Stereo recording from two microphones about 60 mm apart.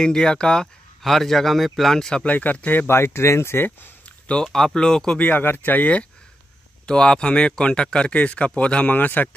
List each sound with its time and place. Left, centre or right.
0.0 s speech: centre
2.2 s speech: left
2.9 s speech: left
4.3 s speech: centre
5.2 s speech: left